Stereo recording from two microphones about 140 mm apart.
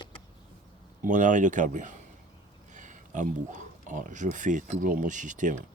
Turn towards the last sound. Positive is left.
turn(degrees=-65)  # may be behind; listen again after turning